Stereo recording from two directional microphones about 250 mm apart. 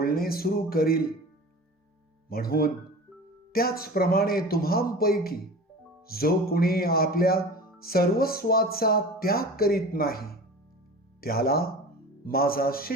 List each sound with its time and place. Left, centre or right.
0.0 s speech: left
2.3 s speech: left